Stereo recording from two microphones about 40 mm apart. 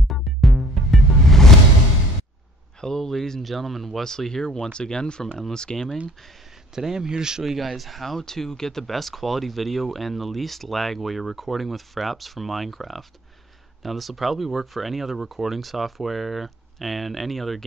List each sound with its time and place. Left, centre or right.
0.1 s music: centre
2.8 s speech: centre
4.0 s speech: centre
6.7 s speech: centre
7.5 s speech: centre